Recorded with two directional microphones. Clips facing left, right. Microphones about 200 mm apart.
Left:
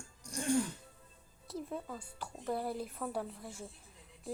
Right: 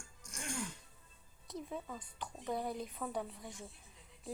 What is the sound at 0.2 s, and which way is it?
Music, 35° left (ahead or behind).